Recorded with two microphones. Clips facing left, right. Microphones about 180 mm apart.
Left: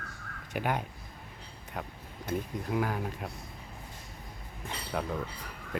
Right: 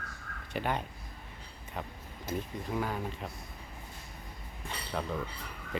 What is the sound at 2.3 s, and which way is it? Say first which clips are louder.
Speech: left 2 dB; 60° left (ahead or behind).